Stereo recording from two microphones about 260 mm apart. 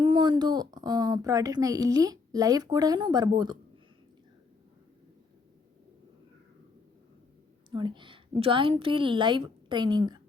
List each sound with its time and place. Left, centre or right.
0.0 s speech: centre
7.7 s a woman's voice: centre